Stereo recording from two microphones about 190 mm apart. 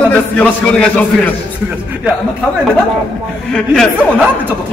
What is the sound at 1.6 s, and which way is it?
Speech, 10° right (ahead or behind).